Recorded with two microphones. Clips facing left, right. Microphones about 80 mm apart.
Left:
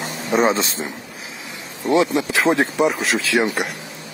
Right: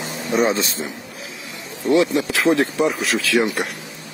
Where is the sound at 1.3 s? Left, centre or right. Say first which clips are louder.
Left 1 dB; left.